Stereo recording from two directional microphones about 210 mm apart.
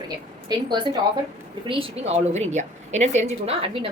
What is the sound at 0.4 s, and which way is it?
A woman's voice, 20° right (ahead or behind).